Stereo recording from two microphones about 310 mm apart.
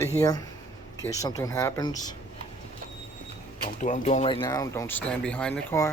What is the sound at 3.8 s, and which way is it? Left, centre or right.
Speech, left.